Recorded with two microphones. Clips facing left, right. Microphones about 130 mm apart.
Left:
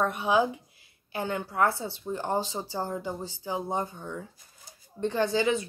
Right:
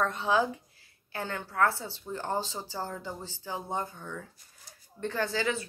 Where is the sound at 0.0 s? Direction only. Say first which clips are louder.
Left 2 dB; 15° left (ahead or behind).